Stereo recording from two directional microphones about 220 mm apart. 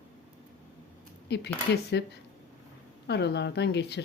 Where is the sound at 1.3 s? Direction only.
50° left (ahead or behind).